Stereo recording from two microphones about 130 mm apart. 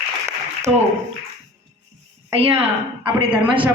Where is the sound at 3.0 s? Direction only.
40° right (ahead or behind).